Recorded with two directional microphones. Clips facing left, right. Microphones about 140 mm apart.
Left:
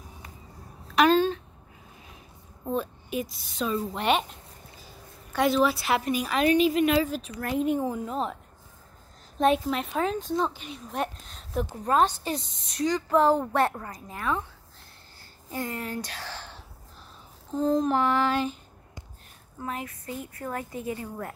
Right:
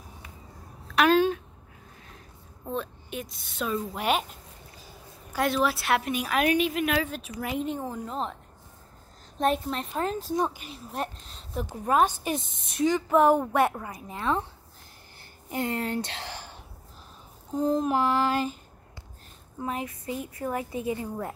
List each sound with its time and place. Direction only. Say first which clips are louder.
0.9 s a sound: even; 10° right (ahead or behind)
2.6 s a woman's voice: left 3 dB; 5° left (ahead or behind)
7.6 s a woman's voice: left 5 dB; 10° left (ahead or behind)
9.7 s a woman's voice: left 2 dB; centre (ahead or behind)
10.3 s a woman's voice: even; 15° right (ahead or behind)
10.7 s a woman's voice: left 2 dB; centre (ahead or behind)
11.8 s a woman's voice: right 1 dB; 10° right (ahead or behind)
14.0 s a woman's voice: right 2 dB; 20° right (ahead or behind)
15.8 s a woman's voice: right 4 dB; 25° right (ahead or behind); by 18.6 s 5° right (ahead or behind)
19.6 s a woman's voice: right 2 dB; 20° right (ahead or behind)